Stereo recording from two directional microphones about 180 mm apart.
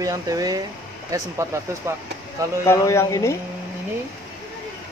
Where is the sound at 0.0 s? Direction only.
20° right (ahead or behind).